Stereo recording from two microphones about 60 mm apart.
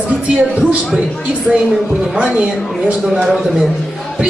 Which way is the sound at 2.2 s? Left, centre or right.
Centre.